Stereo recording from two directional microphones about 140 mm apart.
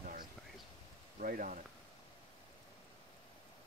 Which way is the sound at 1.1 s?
75° right (ahead or behind).